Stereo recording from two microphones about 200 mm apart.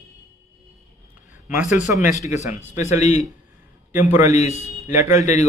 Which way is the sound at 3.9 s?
10° right (ahead or behind).